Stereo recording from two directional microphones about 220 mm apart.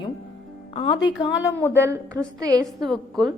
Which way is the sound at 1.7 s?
10° right (ahead or behind).